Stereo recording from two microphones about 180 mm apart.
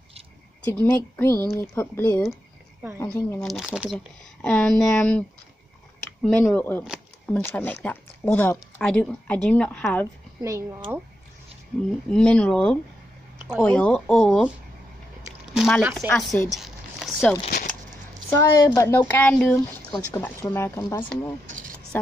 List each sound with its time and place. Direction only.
0.7 s speech: 10° left (ahead or behind)
3.3 s speech: centre (ahead or behind)
10.4 s speech: 15° right (ahead or behind)
12.1 s speech: 5° left (ahead or behind)
15.5 s speech: centre (ahead or behind)
16.1 s a sound: 5° left (ahead or behind)
17.5 s speech: 50° left (ahead or behind)
18.4 s speech: 20° left (ahead or behind)